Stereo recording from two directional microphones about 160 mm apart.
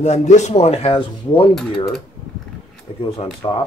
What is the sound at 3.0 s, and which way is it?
Speech, 35° left (ahead or behind).